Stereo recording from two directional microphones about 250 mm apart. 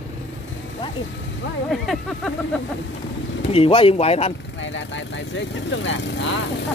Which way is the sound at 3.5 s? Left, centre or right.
Left.